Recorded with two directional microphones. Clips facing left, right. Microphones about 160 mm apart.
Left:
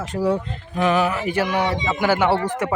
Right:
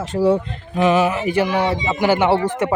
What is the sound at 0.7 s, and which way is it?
Speech, 15° right (ahead or behind).